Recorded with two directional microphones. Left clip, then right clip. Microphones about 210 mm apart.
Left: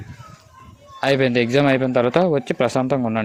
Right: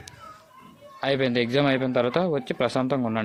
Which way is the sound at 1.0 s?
45° left (ahead or behind).